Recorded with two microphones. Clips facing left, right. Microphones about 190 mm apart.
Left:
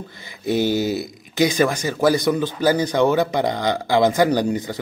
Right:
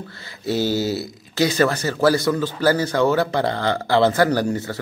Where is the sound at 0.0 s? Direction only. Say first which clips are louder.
Left 1 dB; 15° left (ahead or behind).